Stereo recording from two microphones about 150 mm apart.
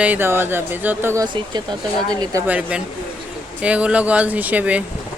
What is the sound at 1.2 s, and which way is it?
Speech, 30° right (ahead or behind).